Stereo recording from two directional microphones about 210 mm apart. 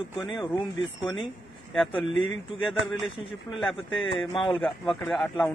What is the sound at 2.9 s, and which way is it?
Speech, centre (ahead or behind).